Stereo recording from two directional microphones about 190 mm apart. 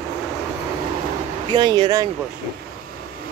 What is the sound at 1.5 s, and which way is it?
Speech, 25° right (ahead or behind).